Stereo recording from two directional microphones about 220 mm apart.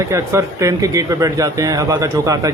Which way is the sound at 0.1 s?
15° right (ahead or behind).